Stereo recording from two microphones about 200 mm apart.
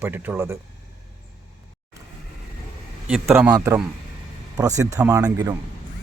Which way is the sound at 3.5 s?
15° right (ahead or behind).